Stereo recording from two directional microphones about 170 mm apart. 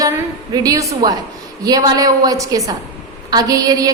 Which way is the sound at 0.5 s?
20° right (ahead or behind).